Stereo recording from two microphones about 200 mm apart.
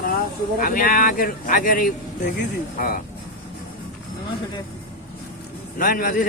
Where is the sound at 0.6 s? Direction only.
45° left (ahead or behind).